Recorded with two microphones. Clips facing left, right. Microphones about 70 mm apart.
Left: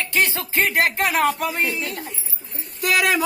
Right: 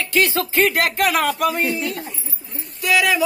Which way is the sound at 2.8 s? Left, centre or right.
Left.